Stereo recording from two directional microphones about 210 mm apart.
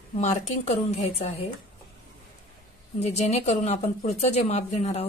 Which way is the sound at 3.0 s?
30° left (ahead or behind).